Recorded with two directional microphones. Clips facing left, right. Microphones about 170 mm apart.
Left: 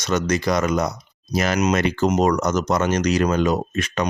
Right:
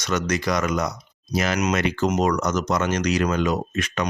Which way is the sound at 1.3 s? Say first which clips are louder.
Left 3 dB; 40° left (ahead or behind).